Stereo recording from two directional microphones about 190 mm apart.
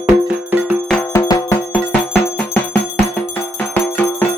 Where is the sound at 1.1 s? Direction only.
20° left (ahead or behind).